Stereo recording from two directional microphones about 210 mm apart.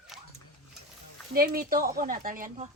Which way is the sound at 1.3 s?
45° right (ahead or behind).